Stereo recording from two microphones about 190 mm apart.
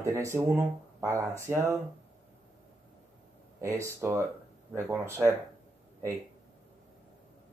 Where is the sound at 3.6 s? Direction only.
15° right (ahead or behind).